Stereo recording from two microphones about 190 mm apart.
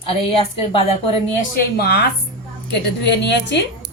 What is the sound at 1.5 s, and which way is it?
A woman's voice, 60° left (ahead or behind).